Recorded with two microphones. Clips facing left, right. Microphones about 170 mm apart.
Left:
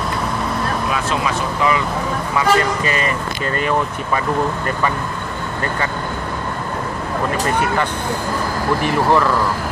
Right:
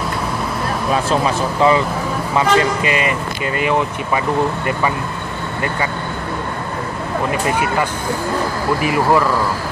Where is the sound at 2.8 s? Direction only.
40° left (ahead or behind).